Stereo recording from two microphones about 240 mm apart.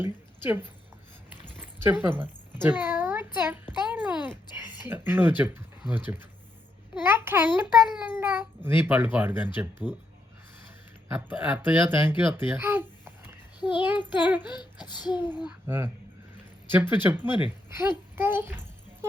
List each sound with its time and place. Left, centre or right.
0.0 s speech: centre
1.8 s a child's voice: centre
11.1 s a child's voice: centre
13.6 s a child's voice: centre
14.3 s a child's voice: centre
14.6 s speech: centre
15.4 s a child's voice: centre